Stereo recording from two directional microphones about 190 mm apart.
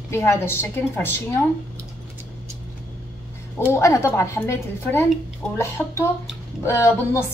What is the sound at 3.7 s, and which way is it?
A woman's voice, 15° left (ahead or behind).